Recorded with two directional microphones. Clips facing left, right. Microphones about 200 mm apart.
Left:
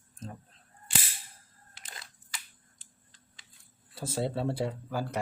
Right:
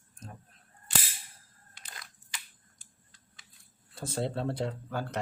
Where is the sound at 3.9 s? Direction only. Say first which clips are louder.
Left 1 dB; 5° left (ahead or behind).